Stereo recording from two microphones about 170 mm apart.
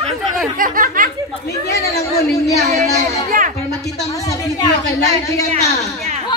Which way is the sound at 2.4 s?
20° left (ahead or behind).